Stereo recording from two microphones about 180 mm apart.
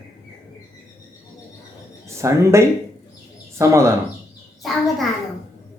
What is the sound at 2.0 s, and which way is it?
Speech, 15° right (ahead or behind).